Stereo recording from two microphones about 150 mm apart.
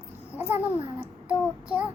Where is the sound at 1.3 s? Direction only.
10° right (ahead or behind).